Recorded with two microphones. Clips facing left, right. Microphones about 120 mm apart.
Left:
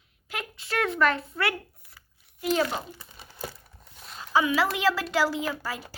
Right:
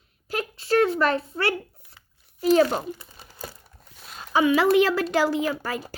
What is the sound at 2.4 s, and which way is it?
Speech, 40° right (ahead or behind).